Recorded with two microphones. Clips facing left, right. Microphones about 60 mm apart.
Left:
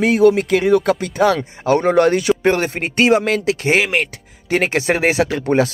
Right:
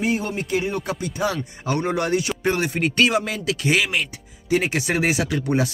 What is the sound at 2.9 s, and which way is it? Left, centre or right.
Speech, left.